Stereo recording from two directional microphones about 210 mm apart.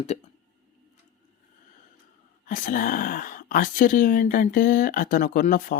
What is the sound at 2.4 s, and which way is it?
Speech, 40° left (ahead or behind).